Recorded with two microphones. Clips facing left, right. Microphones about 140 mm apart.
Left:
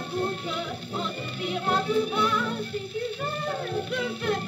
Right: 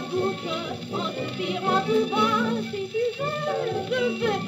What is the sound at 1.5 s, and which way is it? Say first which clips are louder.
Music: right 2 dB; 20° right (ahead or behind).